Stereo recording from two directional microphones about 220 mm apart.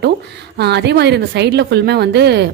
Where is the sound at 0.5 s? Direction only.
50° right (ahead or behind).